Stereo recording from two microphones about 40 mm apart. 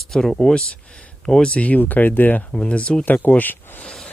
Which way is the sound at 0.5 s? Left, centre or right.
Left.